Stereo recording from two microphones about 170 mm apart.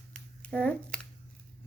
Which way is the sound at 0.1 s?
10° left (ahead or behind).